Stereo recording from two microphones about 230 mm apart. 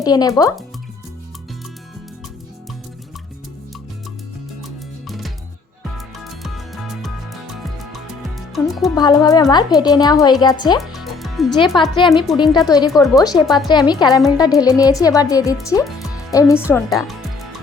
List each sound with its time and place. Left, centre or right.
0.0 s speech: centre
5.0 s music: centre
8.5 s speech: centre
9.0 s speech: centre
10.8 s music: centre
11.7 s a woman's voice: left
12.1 s speech: centre
12.5 s speech: centre